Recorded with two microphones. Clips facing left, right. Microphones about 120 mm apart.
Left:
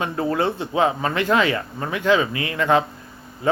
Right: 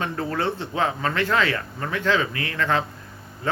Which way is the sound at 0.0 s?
15° left (ahead or behind).